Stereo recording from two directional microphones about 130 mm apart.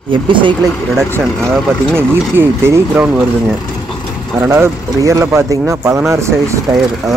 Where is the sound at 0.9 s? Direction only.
20° right (ahead or behind).